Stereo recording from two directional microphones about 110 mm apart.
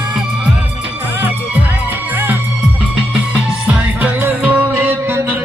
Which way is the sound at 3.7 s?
15° right (ahead or behind).